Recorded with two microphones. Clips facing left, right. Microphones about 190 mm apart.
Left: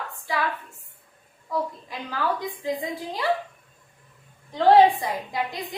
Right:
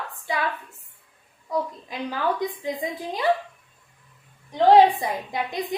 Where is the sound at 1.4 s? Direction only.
20° right (ahead or behind).